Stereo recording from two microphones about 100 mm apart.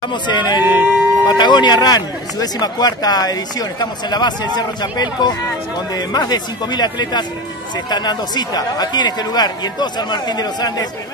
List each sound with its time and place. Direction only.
0.1 s speech: 50° left (ahead or behind)
0.7 s speech: 20° right (ahead or behind)
1.2 s speech: 45° left (ahead or behind)